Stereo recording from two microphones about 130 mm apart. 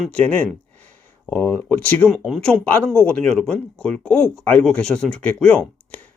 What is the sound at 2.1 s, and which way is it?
Speech, centre (ahead or behind).